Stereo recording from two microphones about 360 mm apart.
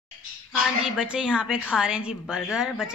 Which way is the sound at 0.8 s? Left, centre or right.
Centre.